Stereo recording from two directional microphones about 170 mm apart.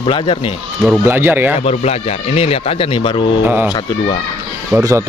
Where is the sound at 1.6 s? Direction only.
40° left (ahead or behind).